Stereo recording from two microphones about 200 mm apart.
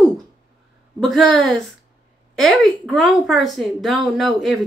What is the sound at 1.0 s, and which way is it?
Speech, centre (ahead or behind).